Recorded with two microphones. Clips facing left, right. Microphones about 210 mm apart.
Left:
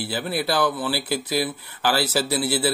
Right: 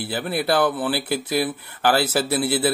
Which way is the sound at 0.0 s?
55° right (ahead or behind).